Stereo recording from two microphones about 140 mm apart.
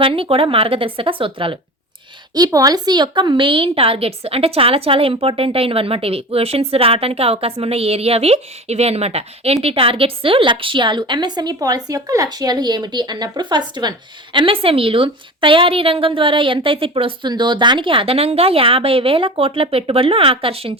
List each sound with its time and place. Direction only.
0.0 s a woman's voice: 40° right (ahead or behind)
2.3 s a woman's voice: 25° right (ahead or behind); by 20.7 s 40° right (ahead or behind)